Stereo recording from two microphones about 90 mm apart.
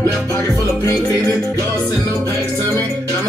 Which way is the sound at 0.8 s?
40° left (ahead or behind).